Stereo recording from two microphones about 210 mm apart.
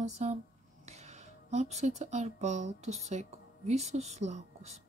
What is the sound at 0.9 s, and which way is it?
Speech, 30° right (ahead or behind).